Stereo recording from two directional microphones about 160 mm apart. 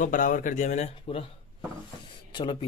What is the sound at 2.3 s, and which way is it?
Speech, 30° left (ahead or behind).